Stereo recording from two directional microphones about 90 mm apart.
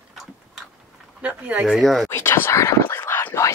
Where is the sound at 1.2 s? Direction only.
15° right (ahead or behind).